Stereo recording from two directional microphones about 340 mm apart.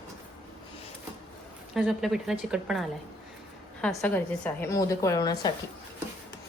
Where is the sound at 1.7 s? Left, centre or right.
Centre.